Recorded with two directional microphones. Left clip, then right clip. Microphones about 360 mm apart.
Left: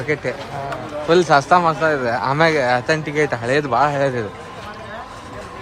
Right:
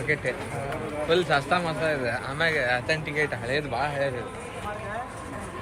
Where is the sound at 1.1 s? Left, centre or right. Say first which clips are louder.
Left 10 dB; centre.